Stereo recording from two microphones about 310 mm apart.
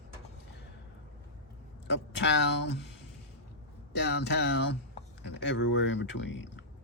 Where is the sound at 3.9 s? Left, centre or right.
Left.